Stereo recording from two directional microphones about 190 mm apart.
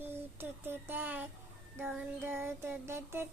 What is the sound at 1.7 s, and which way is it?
Music, 5° right (ahead or behind).